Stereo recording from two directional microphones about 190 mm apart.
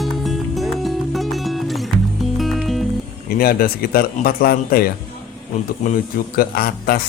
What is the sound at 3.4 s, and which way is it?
Speech, 50° left (ahead or behind).